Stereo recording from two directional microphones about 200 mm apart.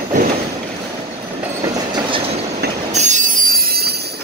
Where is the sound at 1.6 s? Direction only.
25° right (ahead or behind).